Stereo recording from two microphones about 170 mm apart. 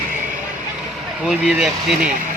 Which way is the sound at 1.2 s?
5° right (ahead or behind).